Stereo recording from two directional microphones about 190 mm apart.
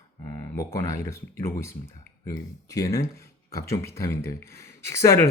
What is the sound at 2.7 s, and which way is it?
A man's voice, 15° left (ahead or behind).